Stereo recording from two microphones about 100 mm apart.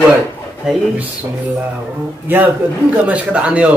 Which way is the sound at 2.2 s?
20° right (ahead or behind).